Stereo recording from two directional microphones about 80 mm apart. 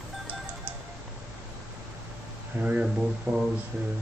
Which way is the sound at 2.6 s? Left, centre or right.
Centre.